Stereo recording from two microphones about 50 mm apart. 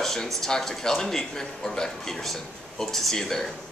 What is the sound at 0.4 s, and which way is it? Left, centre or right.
Speech, centre.